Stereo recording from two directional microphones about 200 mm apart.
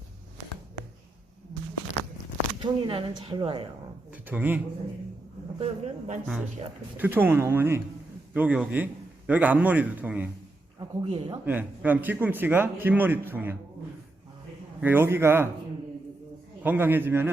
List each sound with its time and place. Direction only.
2.6 s speech: 25° right (ahead or behind)
4.1 s speech: 10° right (ahead or behind)
5.5 s speech: 30° right (ahead or behind)
6.9 s speech: 10° right (ahead or behind)
10.8 s speech: 25° right (ahead or behind)
11.4 s speech: 10° right (ahead or behind)
14.8 s speech: 10° right (ahead or behind)
16.6 s speech: 10° right (ahead or behind)